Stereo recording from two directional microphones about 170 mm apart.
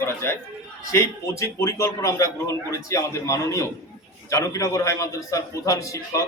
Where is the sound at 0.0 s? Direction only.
15° left (ahead or behind).